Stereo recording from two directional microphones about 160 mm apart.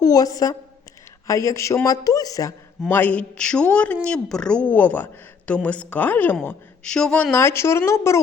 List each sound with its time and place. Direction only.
0.0 s speech: 25° left (ahead or behind)
2.9 s a woman's voice: 10° left (ahead or behind)